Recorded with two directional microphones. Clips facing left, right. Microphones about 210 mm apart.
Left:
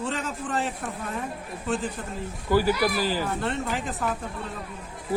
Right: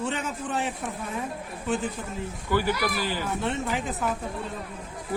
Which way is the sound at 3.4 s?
Centre (ahead or behind).